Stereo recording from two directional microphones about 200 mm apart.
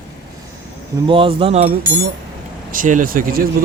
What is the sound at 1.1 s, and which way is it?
Speech, 25° right (ahead or behind).